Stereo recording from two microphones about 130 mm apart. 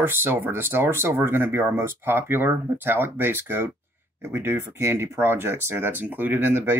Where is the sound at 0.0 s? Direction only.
15° right (ahead or behind).